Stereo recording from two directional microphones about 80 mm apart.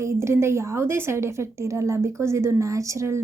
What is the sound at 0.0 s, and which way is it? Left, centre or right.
A woman's voice, right.